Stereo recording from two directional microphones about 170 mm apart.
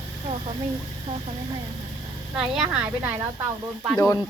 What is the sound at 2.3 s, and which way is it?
Speech, 5° right (ahead or behind).